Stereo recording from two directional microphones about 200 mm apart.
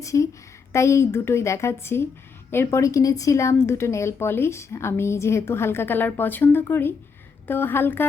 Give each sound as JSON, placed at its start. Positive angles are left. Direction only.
{"t": 0.0, "sound": "a woman's voice", "side_deg": 15}